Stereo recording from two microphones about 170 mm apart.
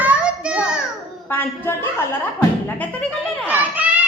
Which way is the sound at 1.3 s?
10° left (ahead or behind).